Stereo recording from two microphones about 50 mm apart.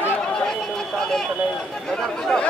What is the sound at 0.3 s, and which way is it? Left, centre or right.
Chatter, centre.